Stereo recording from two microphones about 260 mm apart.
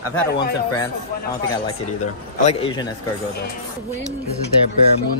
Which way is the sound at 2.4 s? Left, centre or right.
Centre.